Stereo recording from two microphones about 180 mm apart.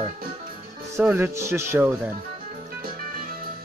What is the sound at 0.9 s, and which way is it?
Speech, 15° right (ahead or behind).